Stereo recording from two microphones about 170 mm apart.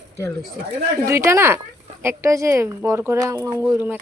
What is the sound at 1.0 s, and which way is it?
Speech, 15° right (ahead or behind).